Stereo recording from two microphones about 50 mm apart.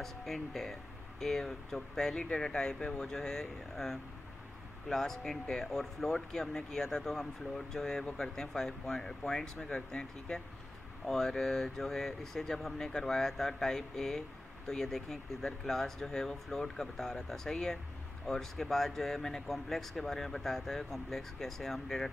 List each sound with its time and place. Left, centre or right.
0.0 s speech: centre
2.1 s speech: centre